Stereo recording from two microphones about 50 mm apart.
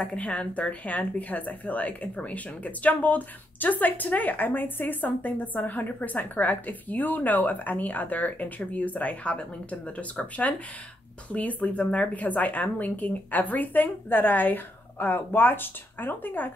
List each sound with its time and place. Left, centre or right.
0.0 s a woman's voice: left